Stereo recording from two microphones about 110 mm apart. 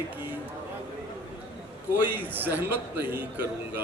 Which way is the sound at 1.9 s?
15° right (ahead or behind).